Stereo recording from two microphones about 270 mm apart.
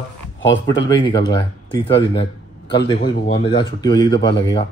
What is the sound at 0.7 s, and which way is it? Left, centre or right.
Speech, centre.